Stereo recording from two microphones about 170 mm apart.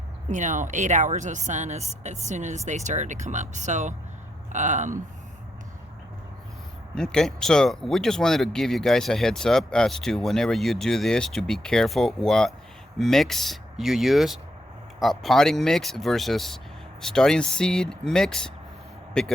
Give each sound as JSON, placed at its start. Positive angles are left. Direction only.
{"t": 0.3, "sound": "speech", "side_deg": -45}
{"t": 6.9, "sound": "speech", "side_deg": 5}